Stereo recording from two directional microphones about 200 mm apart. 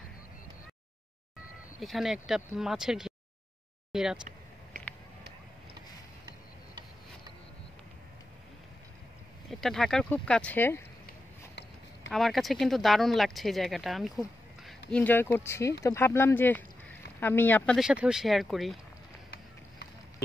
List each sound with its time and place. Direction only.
1.8 s speech: centre (ahead or behind)
4.7 s a sound: 45° right (ahead or behind)
9.5 s speech: centre (ahead or behind)
11.1 s a sound: 60° left (ahead or behind)
12.1 s speech: centre (ahead or behind)
17.7 s speech: 5° right (ahead or behind)